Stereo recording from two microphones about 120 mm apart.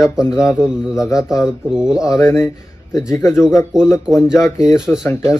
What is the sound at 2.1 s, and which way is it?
Speech, 25° left (ahead or behind).